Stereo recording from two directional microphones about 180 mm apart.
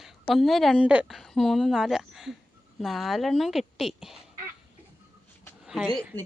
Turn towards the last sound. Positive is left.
turn(degrees=0)  # may be behind; listen again after turning